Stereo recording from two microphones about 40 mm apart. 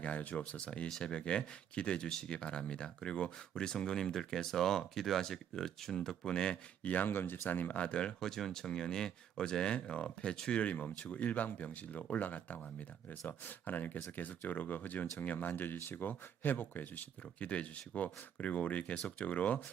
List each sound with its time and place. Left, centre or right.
0.0 s speech: left
0.5 s speech: left
6.8 s speech: left
7.8 s speech: left
17.5 s speech: left